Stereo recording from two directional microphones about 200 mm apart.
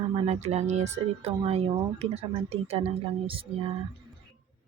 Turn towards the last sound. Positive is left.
turn(degrees=-25)  # may be behind; listen again after turning